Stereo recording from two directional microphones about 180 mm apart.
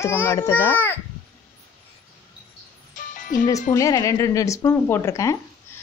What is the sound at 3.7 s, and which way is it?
Speech, 20° left (ahead or behind).